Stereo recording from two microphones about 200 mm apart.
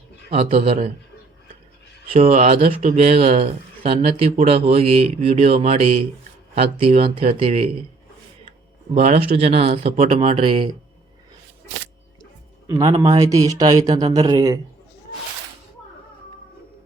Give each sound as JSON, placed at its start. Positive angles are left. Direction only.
{"t": 0.3, "sound": "speech", "side_deg": -30}
{"t": 2.1, "sound": "speech", "side_deg": -30}
{"t": 9.0, "sound": "speech", "side_deg": -35}
{"t": 12.6, "sound": "speech", "side_deg": -20}